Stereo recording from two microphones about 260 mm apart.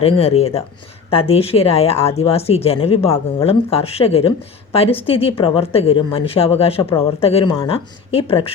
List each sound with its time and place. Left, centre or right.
0.0 s speech: left